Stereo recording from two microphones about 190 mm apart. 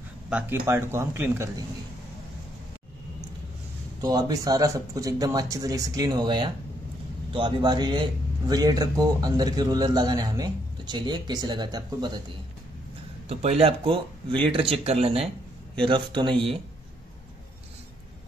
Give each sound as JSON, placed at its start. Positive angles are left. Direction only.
{"t": 0.3, "sound": "speech", "side_deg": -10}
{"t": 4.0, "sound": "speech", "side_deg": -20}
{"t": 13.3, "sound": "speech", "side_deg": -35}